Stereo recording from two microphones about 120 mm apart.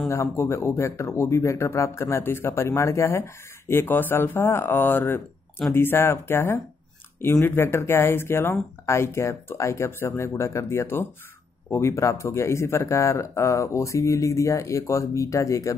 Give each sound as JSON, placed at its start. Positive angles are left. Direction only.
{"t": 0.1, "sound": "speech", "side_deg": 25}